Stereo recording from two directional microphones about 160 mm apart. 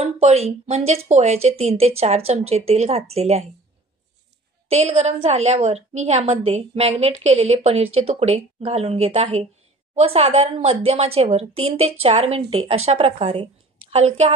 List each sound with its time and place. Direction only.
0.0 s a woman's voice: 40° right (ahead or behind)
4.6 s a woman's voice: 45° right (ahead or behind)